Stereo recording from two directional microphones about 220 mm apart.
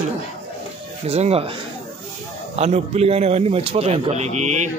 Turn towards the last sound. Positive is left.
turn(degrees=-30)  # may be behind; listen again after turning